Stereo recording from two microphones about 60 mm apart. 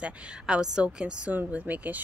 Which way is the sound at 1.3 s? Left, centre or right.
Right.